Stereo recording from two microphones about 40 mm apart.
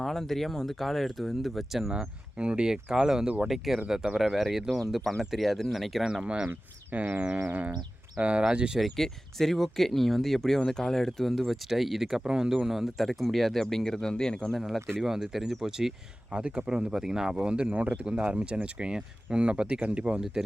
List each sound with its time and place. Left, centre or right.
0.0 s speech: centre
1.9 s speech: right
3.4 s speech: centre
4.4 s speech: centre
6.0 s speech: centre
6.9 s a sound: right
8.2 s speech: right
8.8 s speech: centre
13.0 s speech: centre
14.6 s speech: centre
15.0 s speech: centre
16.3 s speech: right; by 17.3 s centre
17.4 s speech: right
18.0 s speech: right